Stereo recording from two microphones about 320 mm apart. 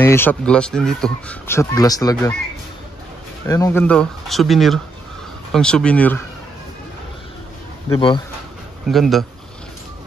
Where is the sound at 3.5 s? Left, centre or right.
Centre.